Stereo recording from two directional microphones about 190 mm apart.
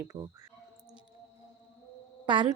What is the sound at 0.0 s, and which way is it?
Speech, 15° right (ahead or behind).